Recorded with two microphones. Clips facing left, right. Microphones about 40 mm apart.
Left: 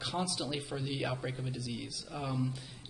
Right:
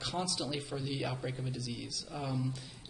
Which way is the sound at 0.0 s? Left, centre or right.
Centre.